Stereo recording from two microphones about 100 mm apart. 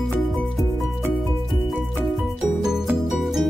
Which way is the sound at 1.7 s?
Centre (ahead or behind).